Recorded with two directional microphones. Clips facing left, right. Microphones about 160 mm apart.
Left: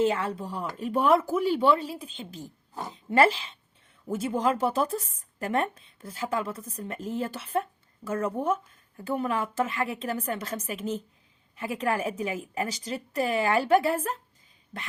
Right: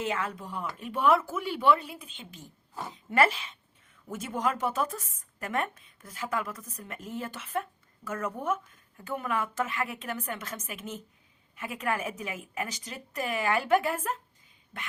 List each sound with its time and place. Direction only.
0.0 s a woman's voice: 30° left (ahead or behind)